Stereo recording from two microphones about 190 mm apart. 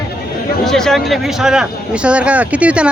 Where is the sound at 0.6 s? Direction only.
Centre (ahead or behind).